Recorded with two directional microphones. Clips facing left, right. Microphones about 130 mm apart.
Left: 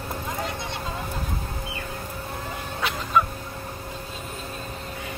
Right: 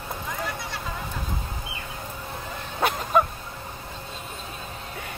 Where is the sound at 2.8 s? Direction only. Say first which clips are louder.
Right 2 dB; 45° right (ahead or behind).